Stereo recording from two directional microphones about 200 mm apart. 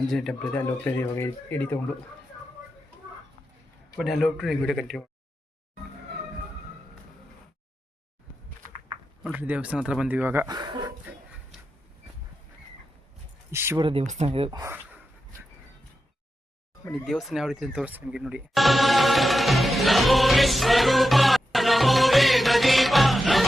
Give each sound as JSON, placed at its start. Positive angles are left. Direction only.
{"t": 0.1, "sound": "speech", "side_deg": 0}
{"t": 4.0, "sound": "speech", "side_deg": 0}
{"t": 9.2, "sound": "speech", "side_deg": -10}
{"t": 13.5, "sound": "speech", "side_deg": -10}
{"t": 13.8, "sound": "speech", "side_deg": -30}
{"t": 14.6, "sound": "dog", "side_deg": -10}
{"t": 16.9, "sound": "music", "side_deg": 0}